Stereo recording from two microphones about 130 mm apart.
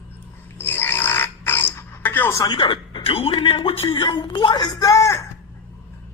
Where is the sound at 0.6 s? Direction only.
15° left (ahead or behind).